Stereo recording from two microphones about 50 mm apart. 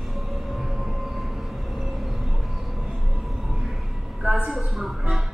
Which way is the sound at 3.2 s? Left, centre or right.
Centre.